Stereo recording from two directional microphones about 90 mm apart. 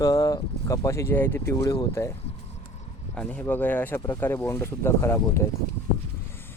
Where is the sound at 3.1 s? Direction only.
15° left (ahead or behind).